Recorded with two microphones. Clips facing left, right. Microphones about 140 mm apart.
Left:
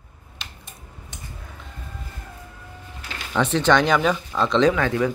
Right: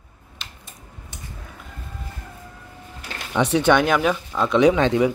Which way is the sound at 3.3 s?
10° right (ahead or behind).